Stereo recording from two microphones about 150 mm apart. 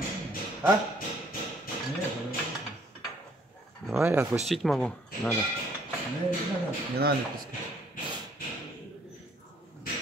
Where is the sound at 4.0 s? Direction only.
15° right (ahead or behind).